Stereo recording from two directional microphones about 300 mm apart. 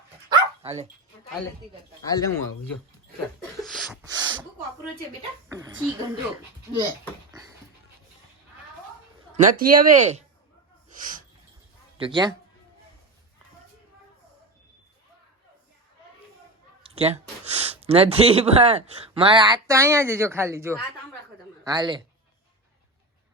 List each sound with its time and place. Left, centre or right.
0.3 s dog: centre
2.0 s speech: centre
3.6 s a sound: centre
4.0 s gasp: centre
5.5 s a woman's voice: centre
9.3 s speech: right
10.8 s sneeze: right
11.9 s a woman's voice: centre
16.8 s speech: centre